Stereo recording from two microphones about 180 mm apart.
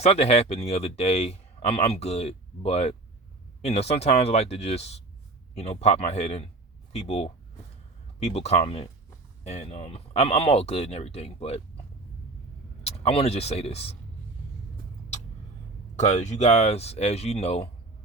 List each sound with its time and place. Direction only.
0.0 s speech: 35° left (ahead or behind)
12.8 s speech: 35° left (ahead or behind)
16.0 s speech: 40° left (ahead or behind)